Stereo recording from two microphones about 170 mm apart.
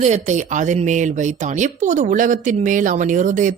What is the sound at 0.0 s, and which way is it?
Speech, 45° right (ahead or behind).